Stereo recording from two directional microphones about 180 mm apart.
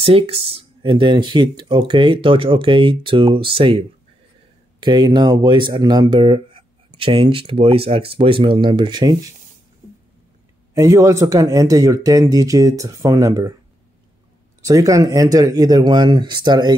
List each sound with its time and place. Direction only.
0.0 s speech: 30° right (ahead or behind)
10.7 s speech: 15° right (ahead or behind)
14.6 s speech: 20° right (ahead or behind)